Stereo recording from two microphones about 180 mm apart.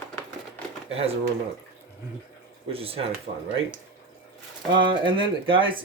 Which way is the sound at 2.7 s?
30° right (ahead or behind).